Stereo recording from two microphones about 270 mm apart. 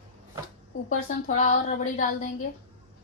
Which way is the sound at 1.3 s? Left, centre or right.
Left.